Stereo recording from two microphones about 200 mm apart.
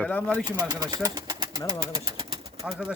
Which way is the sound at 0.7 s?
20° right (ahead or behind).